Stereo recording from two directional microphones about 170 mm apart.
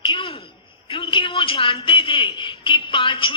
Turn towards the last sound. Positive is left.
turn(degrees=30)  # may be behind; listen again after turning